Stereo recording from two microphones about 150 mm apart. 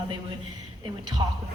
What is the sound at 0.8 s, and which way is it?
Speech, 30° right (ahead or behind).